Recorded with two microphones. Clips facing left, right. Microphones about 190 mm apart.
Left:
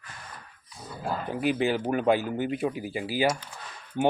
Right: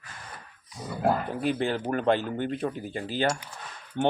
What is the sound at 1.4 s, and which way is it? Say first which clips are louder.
Speech: left 5 dB; 5° left (ahead or behind).